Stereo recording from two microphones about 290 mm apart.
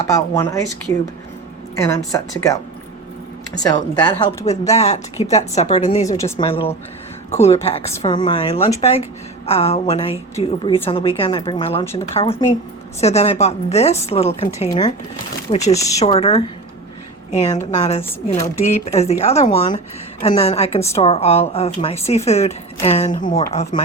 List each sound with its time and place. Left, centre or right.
0.0 s speech: centre
1.7 s speech: centre
6.1 s speech: centre
10.3 s speech: centre
18.6 s speech: left
20.8 s speech: centre
21.1 s speech: left